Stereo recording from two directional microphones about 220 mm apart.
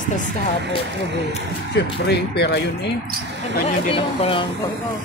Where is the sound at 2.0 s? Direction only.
50° left (ahead or behind).